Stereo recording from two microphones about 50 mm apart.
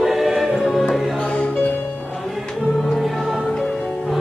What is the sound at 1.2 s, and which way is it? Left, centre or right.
Music, left.